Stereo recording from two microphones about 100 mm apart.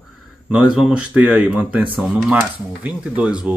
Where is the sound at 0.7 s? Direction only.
10° right (ahead or behind).